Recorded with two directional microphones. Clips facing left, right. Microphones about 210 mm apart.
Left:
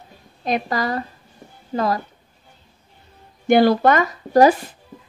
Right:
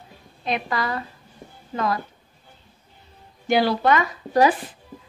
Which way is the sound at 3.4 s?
50° left (ahead or behind).